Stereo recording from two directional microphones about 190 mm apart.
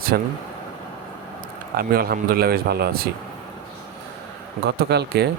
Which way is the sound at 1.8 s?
50° right (ahead or behind).